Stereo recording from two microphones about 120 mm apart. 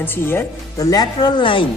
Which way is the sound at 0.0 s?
15° left (ahead or behind).